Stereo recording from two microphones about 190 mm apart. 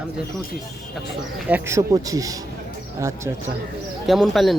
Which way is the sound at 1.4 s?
10° right (ahead or behind).